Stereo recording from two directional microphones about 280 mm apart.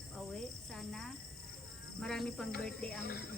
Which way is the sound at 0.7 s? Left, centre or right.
Centre.